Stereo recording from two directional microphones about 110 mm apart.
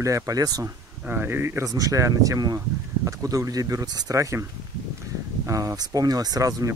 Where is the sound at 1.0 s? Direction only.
20° right (ahead or behind).